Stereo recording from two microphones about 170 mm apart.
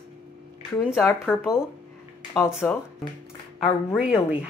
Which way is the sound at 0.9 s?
Centre (ahead or behind).